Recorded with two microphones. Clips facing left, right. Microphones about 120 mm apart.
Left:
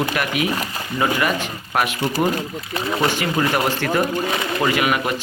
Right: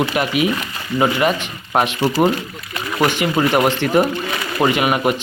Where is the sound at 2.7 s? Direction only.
25° left (ahead or behind).